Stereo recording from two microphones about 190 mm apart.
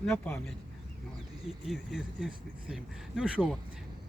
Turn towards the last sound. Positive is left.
turn(degrees=-5)  # may be behind; listen again after turning